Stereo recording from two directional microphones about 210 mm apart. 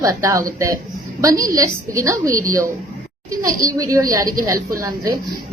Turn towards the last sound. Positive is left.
turn(degrees=-15)  # may be behind; listen again after turning